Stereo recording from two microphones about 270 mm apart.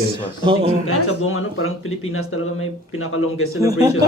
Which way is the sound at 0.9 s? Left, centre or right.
Left.